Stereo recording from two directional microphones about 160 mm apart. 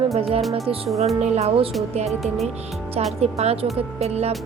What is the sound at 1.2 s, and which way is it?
Speech, 45° right (ahead or behind).